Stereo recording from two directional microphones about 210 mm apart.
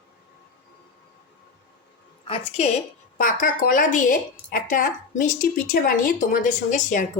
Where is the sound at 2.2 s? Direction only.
25° left (ahead or behind).